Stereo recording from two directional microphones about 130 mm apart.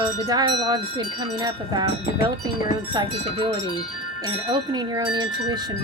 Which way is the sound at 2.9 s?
40° right (ahead or behind).